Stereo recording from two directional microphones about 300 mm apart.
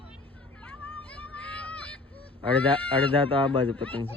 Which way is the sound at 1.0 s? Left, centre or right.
Centre.